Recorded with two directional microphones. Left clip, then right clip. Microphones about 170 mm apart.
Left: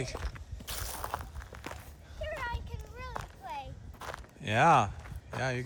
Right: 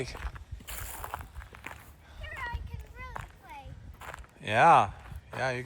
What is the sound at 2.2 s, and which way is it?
Clip-clop, 60° left (ahead or behind).